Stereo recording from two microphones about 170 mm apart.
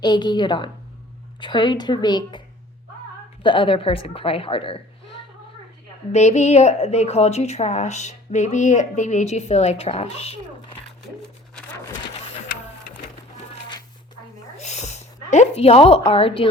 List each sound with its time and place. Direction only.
0.0 s a woman's voice: 25° left (ahead or behind)
3.4 s a woman's voice: 30° left (ahead or behind)
6.1 s a woman's voice: 40° left (ahead or behind)
14.6 s speech: 40° left (ahead or behind)